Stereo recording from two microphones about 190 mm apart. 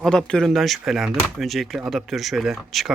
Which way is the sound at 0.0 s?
5° left (ahead or behind).